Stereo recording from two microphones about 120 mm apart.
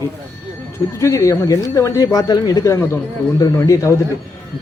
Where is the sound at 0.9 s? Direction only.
25° left (ahead or behind).